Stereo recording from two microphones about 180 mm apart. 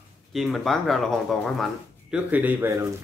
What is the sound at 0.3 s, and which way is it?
Speech, centre (ahead or behind).